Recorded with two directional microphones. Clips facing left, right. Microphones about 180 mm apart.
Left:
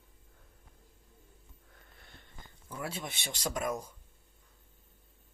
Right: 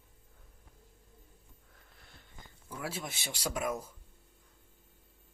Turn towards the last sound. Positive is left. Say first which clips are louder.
# even
turn(degrees=-5)  # may be behind; listen again after turning